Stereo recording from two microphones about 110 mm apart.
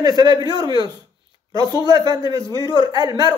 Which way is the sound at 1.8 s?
35° right (ahead or behind).